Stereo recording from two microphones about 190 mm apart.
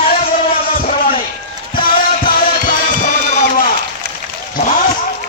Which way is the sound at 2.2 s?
50° left (ahead or behind).